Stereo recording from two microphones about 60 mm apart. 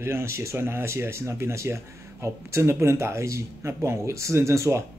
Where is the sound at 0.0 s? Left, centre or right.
Right.